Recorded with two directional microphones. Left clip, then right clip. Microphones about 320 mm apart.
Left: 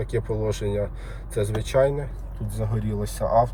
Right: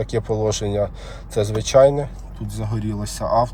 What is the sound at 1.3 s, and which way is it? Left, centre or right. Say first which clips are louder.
Speech: right 7 dB; centre.